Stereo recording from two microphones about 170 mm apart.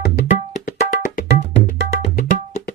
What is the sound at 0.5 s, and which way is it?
Music, 45° left (ahead or behind).